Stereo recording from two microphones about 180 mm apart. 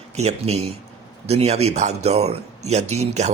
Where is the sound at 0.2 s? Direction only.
35° right (ahead or behind).